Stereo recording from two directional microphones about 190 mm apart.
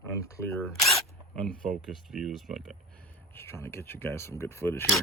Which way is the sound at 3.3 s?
10° left (ahead or behind).